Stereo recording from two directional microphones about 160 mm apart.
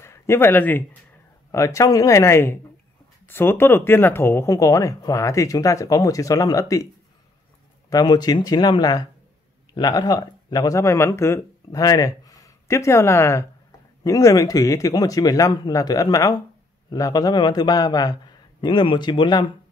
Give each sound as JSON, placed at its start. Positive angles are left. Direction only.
{"t": 0.0, "sound": "speech", "side_deg": 15}
{"t": 7.9, "sound": "speech", "side_deg": 25}